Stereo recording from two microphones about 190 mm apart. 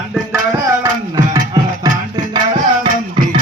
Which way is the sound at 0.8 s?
20° right (ahead or behind).